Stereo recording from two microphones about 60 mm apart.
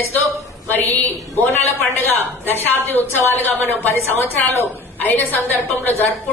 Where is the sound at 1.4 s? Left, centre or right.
Left.